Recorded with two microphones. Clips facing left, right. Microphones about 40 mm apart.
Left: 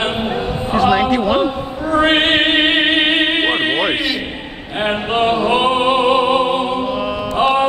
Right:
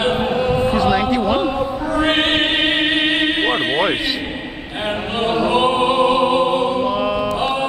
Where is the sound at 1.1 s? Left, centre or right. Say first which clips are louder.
Left 2 dB; left.